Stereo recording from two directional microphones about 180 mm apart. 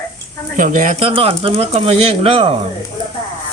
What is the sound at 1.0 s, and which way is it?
Speech, 30° right (ahead or behind).